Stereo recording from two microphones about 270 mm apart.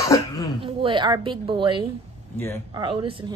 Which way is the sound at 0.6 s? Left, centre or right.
Centre.